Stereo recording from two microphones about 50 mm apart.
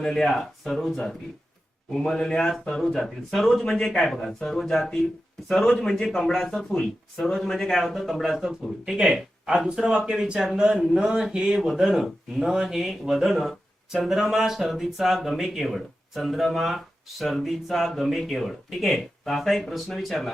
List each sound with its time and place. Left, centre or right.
0.0 s speech: centre